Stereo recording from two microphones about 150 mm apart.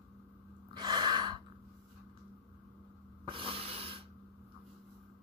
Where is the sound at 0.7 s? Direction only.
30° right (ahead or behind).